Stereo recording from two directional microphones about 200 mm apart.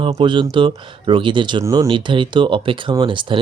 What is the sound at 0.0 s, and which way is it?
Speech, 25° right (ahead or behind).